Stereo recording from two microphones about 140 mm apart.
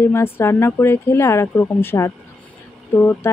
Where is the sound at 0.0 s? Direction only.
20° left (ahead or behind).